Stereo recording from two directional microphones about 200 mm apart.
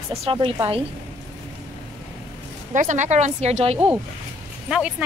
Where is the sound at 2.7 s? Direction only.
40° right (ahead or behind).